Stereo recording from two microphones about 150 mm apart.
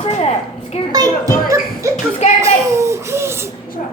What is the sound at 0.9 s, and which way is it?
A child's voice, 25° right (ahead or behind).